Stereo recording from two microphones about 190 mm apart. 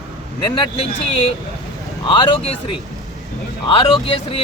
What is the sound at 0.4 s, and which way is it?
Speech, 25° left (ahead or behind).